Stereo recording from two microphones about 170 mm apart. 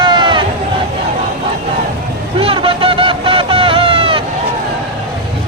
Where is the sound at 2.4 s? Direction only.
30° right (ahead or behind).